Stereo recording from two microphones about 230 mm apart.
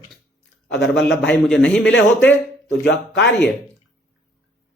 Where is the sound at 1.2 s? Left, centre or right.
Centre.